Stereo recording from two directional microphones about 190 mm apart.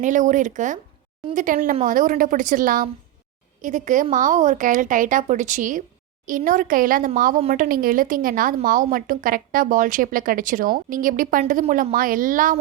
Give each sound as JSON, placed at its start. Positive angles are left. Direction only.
{"t": 0.0, "sound": "speech", "side_deg": -40}